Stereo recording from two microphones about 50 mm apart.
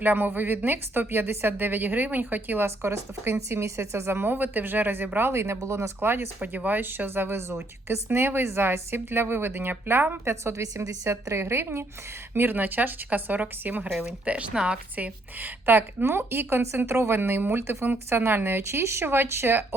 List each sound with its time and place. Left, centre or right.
0.0 s speech: right
2.6 s speech: right
5.3 s speech: right
6.0 s speech: right
6.4 s speech: right
12.3 s speech: right
14.5 s a woman's voice: centre
14.9 s speech: right
19.0 s speech: right